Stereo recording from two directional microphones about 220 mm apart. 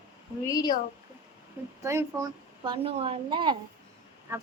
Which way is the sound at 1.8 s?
15° right (ahead or behind).